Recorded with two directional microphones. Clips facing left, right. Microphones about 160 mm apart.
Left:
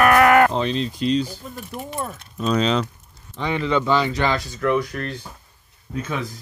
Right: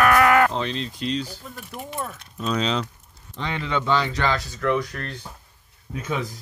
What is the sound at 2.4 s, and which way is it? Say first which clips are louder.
Speech: left 4 dB; 45° left (ahead or behind).